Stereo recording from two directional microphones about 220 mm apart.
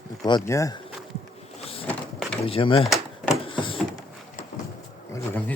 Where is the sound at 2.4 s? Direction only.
25° left (ahead or behind).